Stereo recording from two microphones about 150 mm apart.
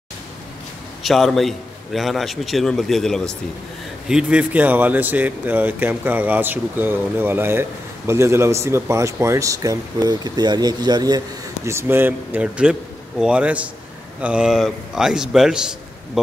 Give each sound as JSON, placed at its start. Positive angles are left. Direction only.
{"t": 1.0, "sound": "a man's voice", "side_deg": 0}